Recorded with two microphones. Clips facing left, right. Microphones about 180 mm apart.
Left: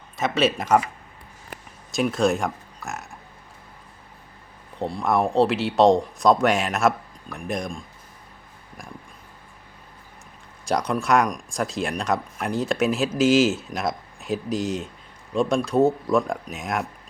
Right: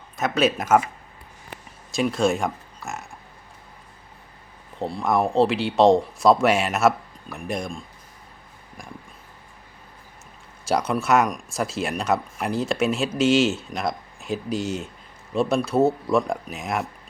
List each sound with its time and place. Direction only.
0.2 s speech: centre (ahead or behind)
1.9 s speech: centre (ahead or behind)
4.8 s speech: centre (ahead or behind)
10.7 s speech: 5° right (ahead or behind)